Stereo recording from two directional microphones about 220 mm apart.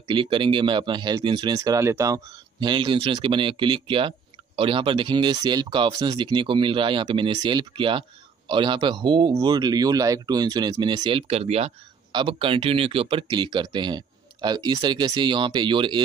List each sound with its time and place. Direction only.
0.1 s speech: 20° right (ahead or behind)